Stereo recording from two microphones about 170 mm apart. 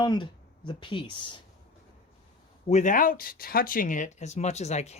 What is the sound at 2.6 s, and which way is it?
Speech, 45° left (ahead or behind).